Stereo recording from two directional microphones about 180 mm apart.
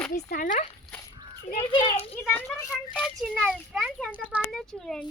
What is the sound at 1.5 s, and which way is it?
Speech, 30° left (ahead or behind).